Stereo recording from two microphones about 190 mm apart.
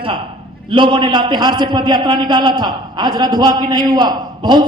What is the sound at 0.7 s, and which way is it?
A man's voice, 25° right (ahead or behind).